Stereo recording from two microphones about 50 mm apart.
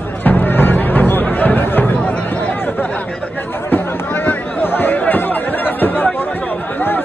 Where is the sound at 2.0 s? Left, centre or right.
Left.